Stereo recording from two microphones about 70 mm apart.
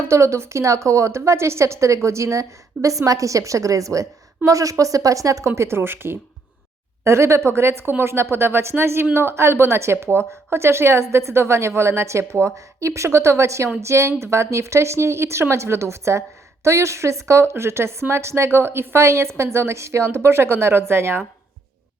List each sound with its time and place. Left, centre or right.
0.1 s a woman's voice: right